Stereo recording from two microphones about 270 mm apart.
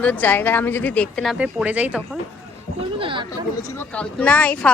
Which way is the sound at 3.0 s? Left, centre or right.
Centre.